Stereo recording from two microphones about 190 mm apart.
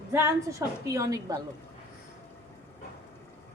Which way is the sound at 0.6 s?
15° right (ahead or behind).